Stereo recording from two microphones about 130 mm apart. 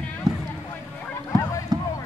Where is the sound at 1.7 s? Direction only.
30° right (ahead or behind).